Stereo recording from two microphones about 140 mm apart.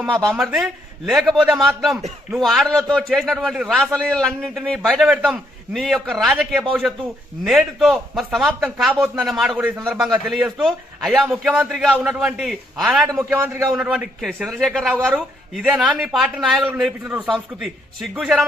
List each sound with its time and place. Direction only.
0.2 s a man's voice: centre (ahead or behind)
13.1 s a man's voice: 20° right (ahead or behind)
13.7 s a man's voice: 5° right (ahead or behind)